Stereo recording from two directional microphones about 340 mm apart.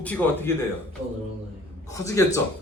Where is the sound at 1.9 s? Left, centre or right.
Centre.